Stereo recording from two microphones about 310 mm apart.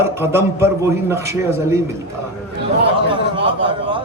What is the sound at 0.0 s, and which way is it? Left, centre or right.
A man's voice, centre.